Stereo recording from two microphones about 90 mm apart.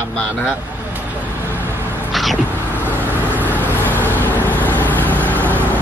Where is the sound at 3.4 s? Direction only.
20° left (ahead or behind).